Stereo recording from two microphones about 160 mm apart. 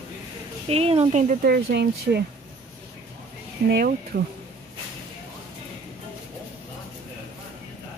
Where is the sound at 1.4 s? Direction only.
80° right.